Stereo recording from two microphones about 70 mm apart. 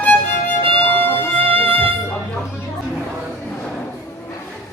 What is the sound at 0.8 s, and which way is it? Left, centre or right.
Music, left.